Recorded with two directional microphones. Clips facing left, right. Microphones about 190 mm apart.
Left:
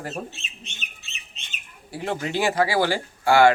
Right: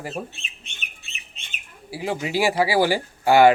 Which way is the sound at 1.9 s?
5° right (ahead or behind).